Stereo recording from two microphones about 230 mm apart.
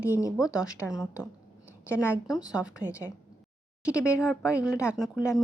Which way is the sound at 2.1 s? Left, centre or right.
Centre.